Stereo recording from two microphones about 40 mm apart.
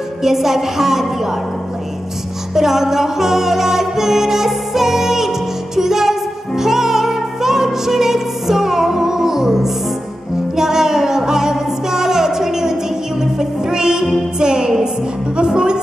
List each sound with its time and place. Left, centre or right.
0.2 s a woman's voice: centre
2.5 s music: centre